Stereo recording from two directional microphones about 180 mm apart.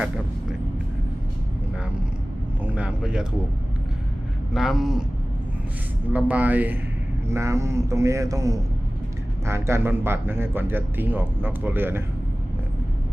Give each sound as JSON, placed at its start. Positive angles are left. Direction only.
{"t": 2.6, "sound": "a sound", "side_deg": -5}
{"t": 4.5, "sound": "speech", "side_deg": 0}
{"t": 6.1, "sound": "speech", "side_deg": -10}